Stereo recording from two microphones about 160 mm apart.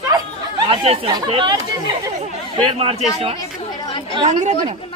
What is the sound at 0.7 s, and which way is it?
Speech, 35° right (ahead or behind).